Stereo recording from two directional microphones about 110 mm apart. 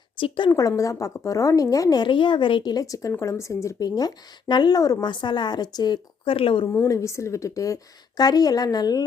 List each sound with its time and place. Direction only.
0.2 s a woman's voice: 45° left (ahead or behind)
0.8 s speech: 30° left (ahead or behind); by 2.7 s 50° left (ahead or behind)
2.7 s speech: 30° left (ahead or behind)
6.3 s a woman's voice: 55° left (ahead or behind)
6.8 s speech: 30° left (ahead or behind)